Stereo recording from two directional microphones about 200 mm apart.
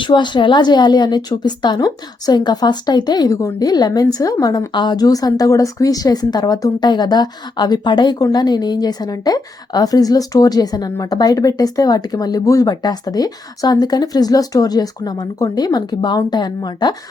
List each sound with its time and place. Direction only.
0.0 s a woman's voice: 25° left (ahead or behind)